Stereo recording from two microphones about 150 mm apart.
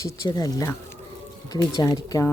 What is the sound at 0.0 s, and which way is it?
Speech, 25° left (ahead or behind).